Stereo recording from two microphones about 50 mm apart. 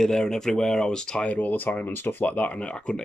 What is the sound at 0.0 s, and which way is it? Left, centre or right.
Speech, centre.